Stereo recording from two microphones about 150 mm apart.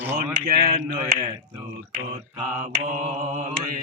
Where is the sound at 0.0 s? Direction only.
10° right (ahead or behind).